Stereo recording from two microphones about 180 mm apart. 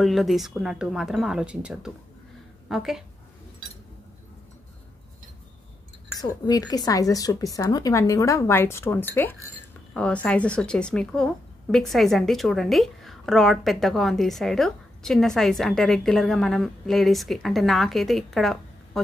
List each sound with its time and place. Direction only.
0.0 s a woman's voice: centre (ahead or behind)
6.4 s a woman's voice: 20° left (ahead or behind); by 18.6 s centre (ahead or behind)